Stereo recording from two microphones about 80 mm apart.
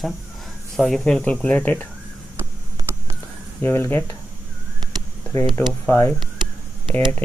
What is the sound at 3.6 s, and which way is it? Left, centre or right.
Speech, left.